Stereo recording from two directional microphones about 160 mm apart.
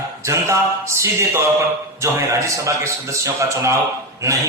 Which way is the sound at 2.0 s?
15° right (ahead or behind).